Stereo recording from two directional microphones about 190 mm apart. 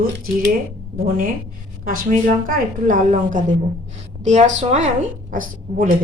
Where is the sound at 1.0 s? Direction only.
45° right (ahead or behind).